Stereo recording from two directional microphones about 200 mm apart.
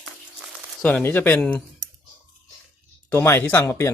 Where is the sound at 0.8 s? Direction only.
5° left (ahead or behind).